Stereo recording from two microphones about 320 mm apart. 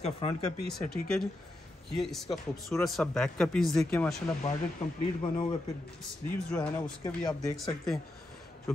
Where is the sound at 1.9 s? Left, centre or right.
Centre.